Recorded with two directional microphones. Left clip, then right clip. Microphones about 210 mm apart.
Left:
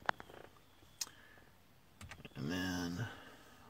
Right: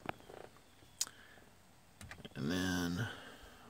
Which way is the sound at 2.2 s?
20° right (ahead or behind).